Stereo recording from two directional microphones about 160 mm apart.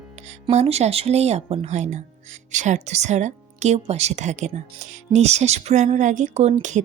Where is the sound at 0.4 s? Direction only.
40° right (ahead or behind).